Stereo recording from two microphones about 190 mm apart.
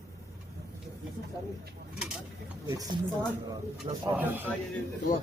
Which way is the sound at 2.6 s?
20° right (ahead or behind).